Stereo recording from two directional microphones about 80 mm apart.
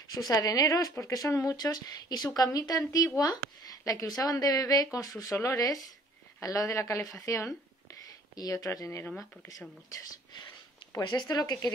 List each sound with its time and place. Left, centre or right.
0.1 s speech: left
11.1 s speech: left